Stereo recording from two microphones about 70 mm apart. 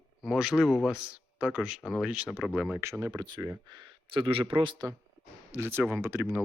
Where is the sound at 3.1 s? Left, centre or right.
Right.